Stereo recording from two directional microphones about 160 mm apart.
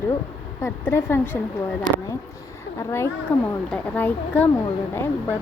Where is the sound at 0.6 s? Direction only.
15° left (ahead or behind).